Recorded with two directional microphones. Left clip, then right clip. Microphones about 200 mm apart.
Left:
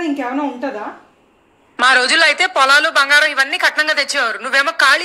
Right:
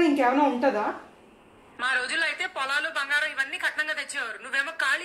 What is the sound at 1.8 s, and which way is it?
A woman's voice, 50° left (ahead or behind).